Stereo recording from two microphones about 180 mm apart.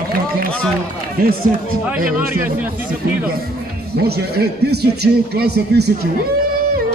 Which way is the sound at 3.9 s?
60° right (ahead or behind).